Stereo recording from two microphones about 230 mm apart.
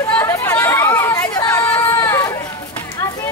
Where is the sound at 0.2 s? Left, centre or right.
Centre.